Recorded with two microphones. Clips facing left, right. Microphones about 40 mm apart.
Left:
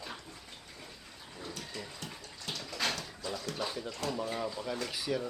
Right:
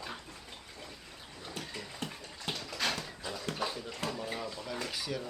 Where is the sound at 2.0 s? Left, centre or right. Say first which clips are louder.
Right 3 dB; right.